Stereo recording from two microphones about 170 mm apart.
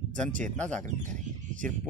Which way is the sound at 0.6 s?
5° left (ahead or behind).